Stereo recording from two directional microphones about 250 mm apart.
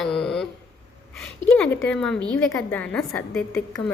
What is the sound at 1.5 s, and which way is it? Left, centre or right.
A woman's voice, centre.